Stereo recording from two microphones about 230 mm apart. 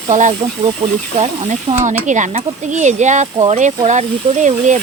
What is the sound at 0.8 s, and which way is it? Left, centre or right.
Speech, centre.